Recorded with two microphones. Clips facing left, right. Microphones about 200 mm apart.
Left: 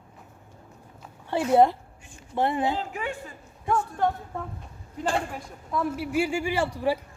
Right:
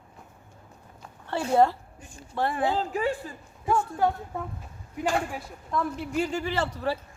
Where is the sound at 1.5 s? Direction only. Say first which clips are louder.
Left 2 dB; 15° left (ahead or behind).